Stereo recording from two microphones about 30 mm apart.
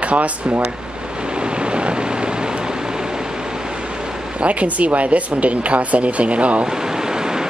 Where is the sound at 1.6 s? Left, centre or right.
Right.